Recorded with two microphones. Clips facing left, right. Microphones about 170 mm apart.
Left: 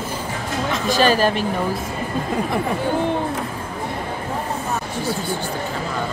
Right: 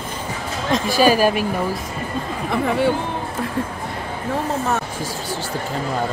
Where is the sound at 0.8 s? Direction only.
10° right (ahead or behind).